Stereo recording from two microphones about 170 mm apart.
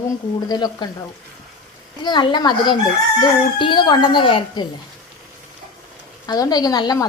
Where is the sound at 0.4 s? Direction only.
25° left (ahead or behind).